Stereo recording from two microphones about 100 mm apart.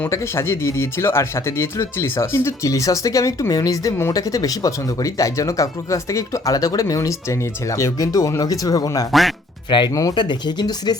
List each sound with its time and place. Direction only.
0.1 s speech: 25° left (ahead or behind)
9.6 s speech: 50° left (ahead or behind)
9.9 s speech: 35° left (ahead or behind)
10.2 s speech: 50° left (ahead or behind)